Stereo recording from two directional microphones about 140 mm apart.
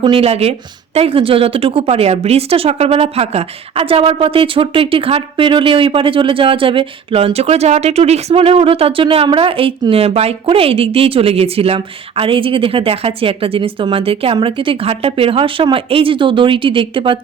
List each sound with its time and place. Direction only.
0.0 s a woman's voice: 40° right (ahead or behind)